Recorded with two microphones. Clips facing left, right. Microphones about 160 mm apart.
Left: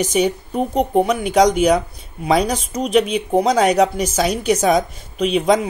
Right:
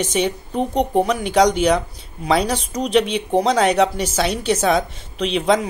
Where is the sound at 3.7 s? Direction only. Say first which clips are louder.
Left 2 dB; 30° right (ahead or behind).